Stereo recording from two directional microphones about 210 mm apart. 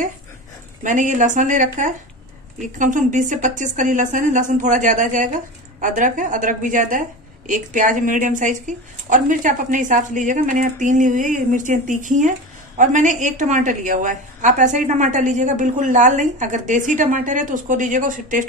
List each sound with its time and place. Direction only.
0.8 s a woman's voice: 35° right (ahead or behind)